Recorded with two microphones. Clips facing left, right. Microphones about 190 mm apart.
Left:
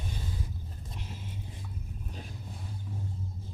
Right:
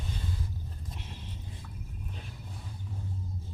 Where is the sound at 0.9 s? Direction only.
Centre (ahead or behind).